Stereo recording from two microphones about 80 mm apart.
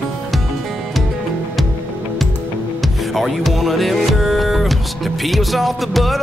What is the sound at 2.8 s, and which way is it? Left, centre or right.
Music, centre.